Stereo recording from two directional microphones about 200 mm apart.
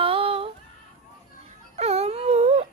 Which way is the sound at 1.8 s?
30° right (ahead or behind).